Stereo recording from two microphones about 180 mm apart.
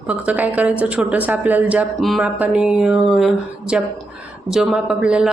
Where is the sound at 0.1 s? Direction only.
10° right (ahead or behind).